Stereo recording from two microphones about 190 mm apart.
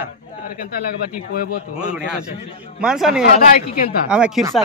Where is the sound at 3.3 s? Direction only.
50° left (ahead or behind).